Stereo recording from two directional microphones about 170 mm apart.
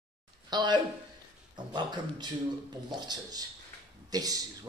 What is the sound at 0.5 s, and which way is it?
Speech, 25° right (ahead or behind).